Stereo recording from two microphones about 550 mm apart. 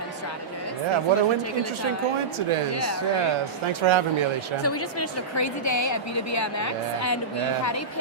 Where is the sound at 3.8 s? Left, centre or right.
Right.